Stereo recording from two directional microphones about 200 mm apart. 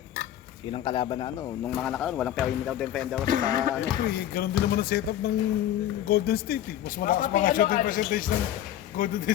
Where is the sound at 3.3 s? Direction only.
45° right (ahead or behind).